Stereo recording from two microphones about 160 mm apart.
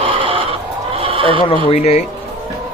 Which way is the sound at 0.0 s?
35° right (ahead or behind).